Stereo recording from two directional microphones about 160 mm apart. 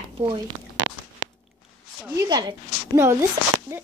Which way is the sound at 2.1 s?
25° right (ahead or behind).